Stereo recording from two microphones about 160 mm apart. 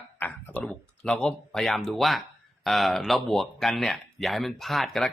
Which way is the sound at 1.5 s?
Centre (ahead or behind).